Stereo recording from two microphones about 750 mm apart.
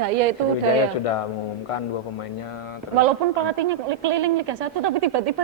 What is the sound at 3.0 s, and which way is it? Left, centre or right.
A woman's voice, right.